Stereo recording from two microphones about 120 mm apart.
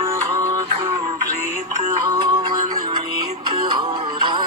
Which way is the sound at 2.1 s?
35° right (ahead or behind).